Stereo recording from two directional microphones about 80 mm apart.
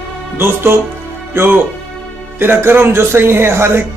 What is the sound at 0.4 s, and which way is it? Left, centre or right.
Speech, right.